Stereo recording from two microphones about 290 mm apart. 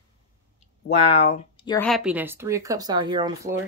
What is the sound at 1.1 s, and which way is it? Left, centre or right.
Speech, left.